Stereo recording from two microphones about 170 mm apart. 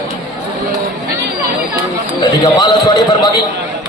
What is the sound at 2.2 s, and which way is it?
Speech, 25° left (ahead or behind).